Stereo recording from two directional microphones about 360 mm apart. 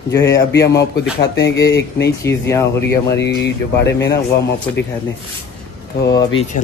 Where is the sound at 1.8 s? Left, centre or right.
Left.